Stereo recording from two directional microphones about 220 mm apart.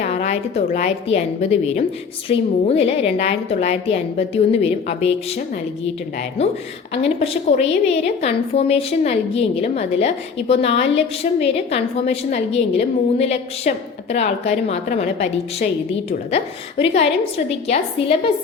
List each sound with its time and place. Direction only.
0.0 s a woman's voice: 30° left (ahead or behind)
7.5 s a woman's voice: 30° left (ahead or behind)